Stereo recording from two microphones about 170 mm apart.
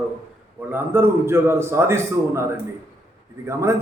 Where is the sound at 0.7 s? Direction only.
15° right (ahead or behind).